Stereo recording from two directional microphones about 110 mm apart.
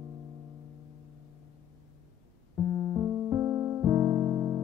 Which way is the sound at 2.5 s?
30° right (ahead or behind).